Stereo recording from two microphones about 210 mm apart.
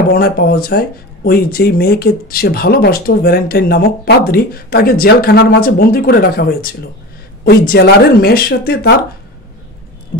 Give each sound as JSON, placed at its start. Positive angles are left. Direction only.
{"t": 0.1, "sound": "speech", "side_deg": 45}